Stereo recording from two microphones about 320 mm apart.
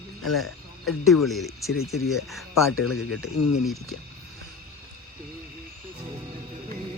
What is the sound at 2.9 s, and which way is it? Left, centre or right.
Speech, left.